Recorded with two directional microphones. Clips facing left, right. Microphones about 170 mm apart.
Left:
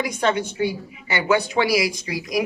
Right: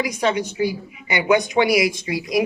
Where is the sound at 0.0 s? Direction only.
10° right (ahead or behind).